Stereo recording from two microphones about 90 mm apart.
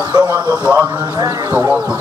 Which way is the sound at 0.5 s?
20° right (ahead or behind).